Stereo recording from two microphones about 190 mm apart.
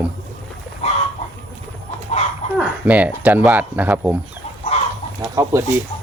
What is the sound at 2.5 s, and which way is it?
Speech, 5° right (ahead or behind).